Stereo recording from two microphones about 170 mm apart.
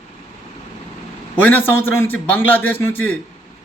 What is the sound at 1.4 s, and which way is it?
A man's voice, 10° left (ahead or behind).